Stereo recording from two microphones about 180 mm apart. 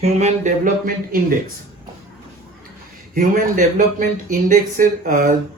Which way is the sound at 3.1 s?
50° right (ahead or behind).